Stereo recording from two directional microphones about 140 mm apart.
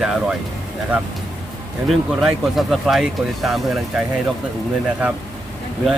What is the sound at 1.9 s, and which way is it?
Speech, centre (ahead or behind).